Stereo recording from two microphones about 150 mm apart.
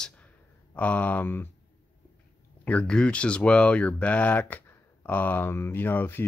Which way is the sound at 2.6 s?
10° left (ahead or behind).